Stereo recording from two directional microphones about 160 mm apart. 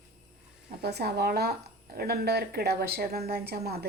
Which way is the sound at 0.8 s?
90° right.